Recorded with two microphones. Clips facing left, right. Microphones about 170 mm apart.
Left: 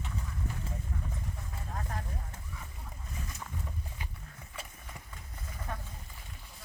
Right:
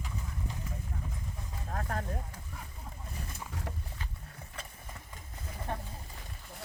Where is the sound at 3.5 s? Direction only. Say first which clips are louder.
Right 2 dB; 85° right.